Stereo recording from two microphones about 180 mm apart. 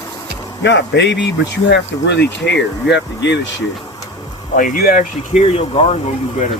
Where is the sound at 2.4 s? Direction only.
65° left (ahead or behind).